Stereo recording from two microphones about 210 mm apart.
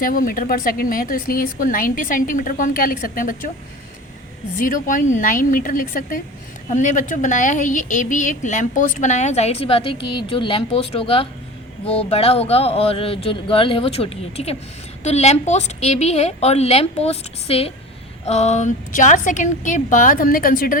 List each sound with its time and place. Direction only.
0.0 s a woman's voice: 45° left (ahead or behind)
4.5 s a woman's voice: 40° left (ahead or behind)